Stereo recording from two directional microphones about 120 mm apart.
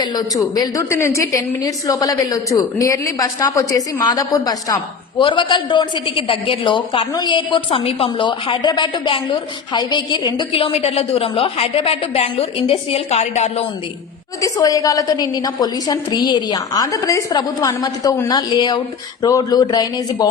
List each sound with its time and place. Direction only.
0.0 s a woman's voice: 35° left (ahead or behind); by 13.7 s 65° left (ahead or behind)
14.4 s a woman's voice: 30° left (ahead or behind)